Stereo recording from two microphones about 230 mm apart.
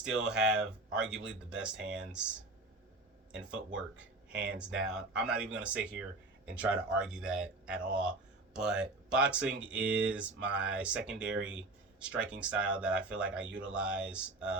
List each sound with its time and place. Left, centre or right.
0.0 s speech: centre
3.3 s speech: centre